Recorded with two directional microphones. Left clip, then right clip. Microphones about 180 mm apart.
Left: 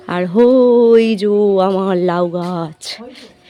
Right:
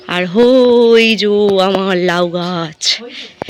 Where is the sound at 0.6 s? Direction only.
10° left (ahead or behind).